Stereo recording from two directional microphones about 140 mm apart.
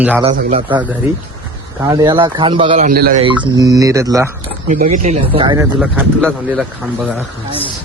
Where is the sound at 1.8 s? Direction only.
30° right (ahead or behind).